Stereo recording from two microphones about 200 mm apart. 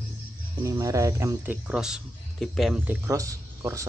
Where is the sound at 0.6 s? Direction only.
15° right (ahead or behind).